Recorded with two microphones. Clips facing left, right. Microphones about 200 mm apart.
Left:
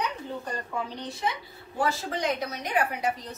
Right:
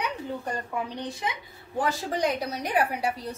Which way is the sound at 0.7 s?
15° right (ahead or behind).